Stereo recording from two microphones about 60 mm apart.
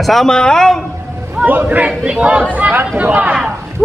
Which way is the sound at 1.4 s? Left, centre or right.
Right.